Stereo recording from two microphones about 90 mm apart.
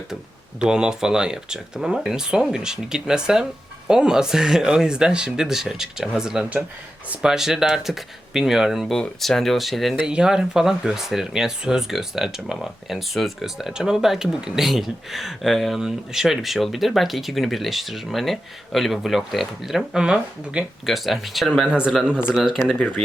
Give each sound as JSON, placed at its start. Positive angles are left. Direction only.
{"t": 0.6, "sound": "speech", "side_deg": -10}
{"t": 20.8, "sound": "speech", "side_deg": 0}
{"t": 22.7, "sound": "speech", "side_deg": 15}